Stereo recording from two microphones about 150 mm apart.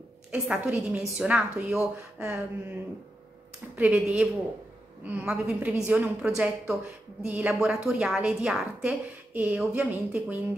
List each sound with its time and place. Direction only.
0.3 s a woman's voice: 10° right (ahead or behind)
3.7 s a woman's voice: 5° right (ahead or behind)